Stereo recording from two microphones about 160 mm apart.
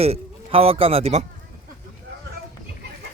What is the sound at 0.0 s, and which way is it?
A man's voice, 40° right (ahead or behind).